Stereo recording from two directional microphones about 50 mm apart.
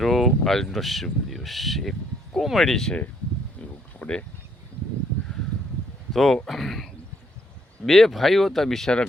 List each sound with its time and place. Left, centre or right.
0.0 s a sound: centre
0.3 s speech: centre
4.0 s speech: left
6.1 s speech: centre